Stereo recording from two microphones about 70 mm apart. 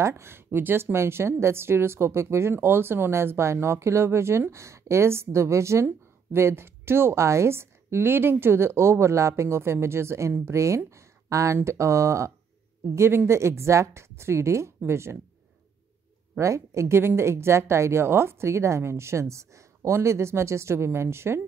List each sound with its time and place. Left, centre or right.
0.0 s a woman's voice: right
16.3 s a woman's voice: right